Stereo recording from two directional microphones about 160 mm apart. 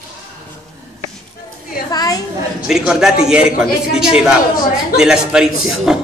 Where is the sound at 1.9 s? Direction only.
25° left (ahead or behind).